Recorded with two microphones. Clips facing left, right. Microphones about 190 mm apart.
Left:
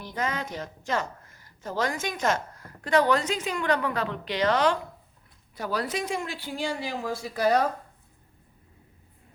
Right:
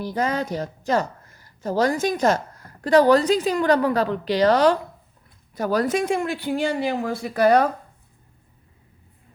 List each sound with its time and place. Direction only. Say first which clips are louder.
0.0 s a woman's voice: right 7 dB; 35° right (ahead or behind); by 7.7 s 60° right (ahead or behind)